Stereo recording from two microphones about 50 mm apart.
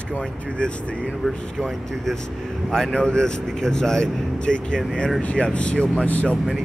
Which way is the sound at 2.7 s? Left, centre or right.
Centre.